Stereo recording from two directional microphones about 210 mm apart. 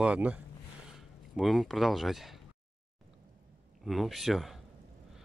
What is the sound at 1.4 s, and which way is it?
Speech, centre (ahead or behind).